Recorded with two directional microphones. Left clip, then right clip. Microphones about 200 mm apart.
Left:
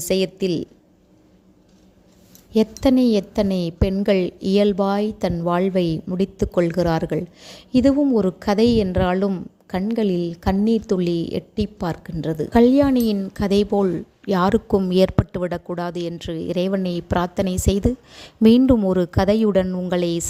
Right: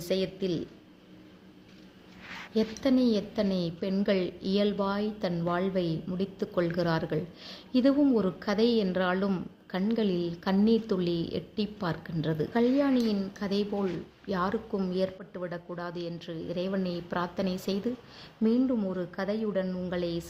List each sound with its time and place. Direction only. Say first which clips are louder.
0.0 s a woman's voice: left 9 dB; 45° left (ahead or behind)
2.5 s a woman's voice: left 10 dB; 45° left (ahead or behind)